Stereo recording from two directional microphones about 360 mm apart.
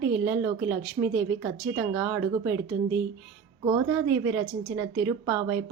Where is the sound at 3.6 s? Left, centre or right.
Centre.